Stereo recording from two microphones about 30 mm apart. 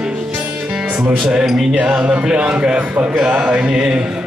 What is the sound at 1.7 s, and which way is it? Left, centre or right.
Music, right.